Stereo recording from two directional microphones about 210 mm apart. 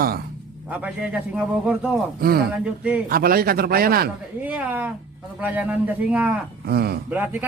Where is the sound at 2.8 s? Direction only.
5° right (ahead or behind).